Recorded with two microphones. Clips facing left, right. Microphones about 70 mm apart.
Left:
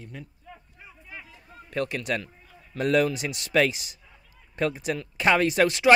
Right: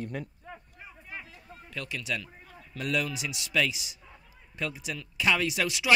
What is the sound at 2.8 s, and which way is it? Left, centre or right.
Speech, left.